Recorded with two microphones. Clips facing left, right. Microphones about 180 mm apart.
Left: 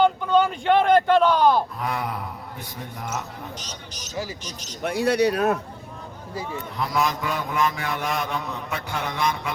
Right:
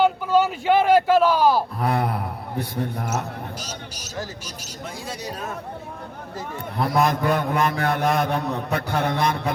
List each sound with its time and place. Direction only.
0.0 s speech: 5° right (ahead or behind)
2.6 s mantra: 60° right (ahead or behind)
3.6 s a man's voice: 10° right (ahead or behind)
4.8 s speech: 70° left (ahead or behind)
6.7 s mantra: 55° right (ahead or behind)